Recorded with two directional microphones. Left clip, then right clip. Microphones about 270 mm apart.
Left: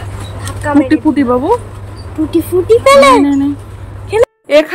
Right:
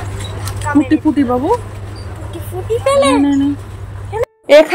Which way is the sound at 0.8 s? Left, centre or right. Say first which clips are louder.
Left 3 dB; centre.